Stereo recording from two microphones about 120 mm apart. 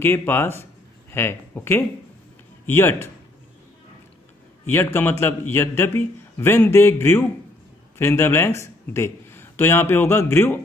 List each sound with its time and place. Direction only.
0.0 s a man's voice: 20° left (ahead or behind)
4.6 s a man's voice: 20° left (ahead or behind)